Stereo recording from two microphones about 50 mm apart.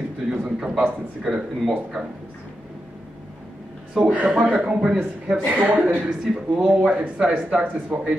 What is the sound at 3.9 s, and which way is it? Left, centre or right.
A man's voice, right.